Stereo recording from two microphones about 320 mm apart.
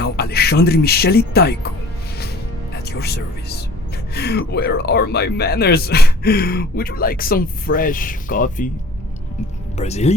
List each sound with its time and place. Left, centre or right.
0.0 s speech: left
2.7 s music: left
4.1 s speech: left
9.7 s speech: centre